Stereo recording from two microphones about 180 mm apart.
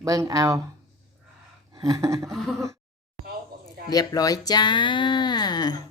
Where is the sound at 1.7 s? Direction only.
20° right (ahead or behind).